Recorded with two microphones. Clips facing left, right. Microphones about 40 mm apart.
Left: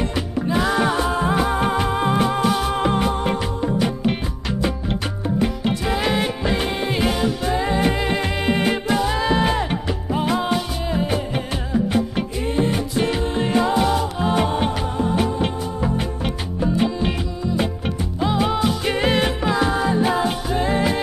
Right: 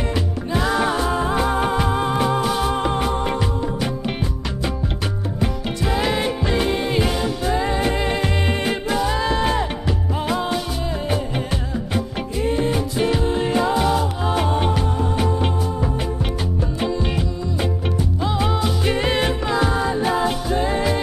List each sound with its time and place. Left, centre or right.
0.5 s music: centre
5.4 s music: centre
18.2 s music: centre